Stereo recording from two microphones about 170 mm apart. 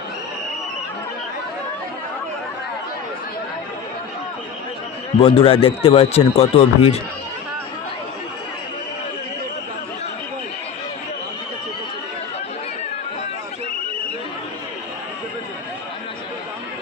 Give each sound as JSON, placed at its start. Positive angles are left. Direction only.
{"t": 5.2, "sound": "speech", "side_deg": 30}